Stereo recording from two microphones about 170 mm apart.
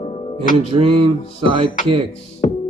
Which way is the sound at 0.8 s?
35° right (ahead or behind).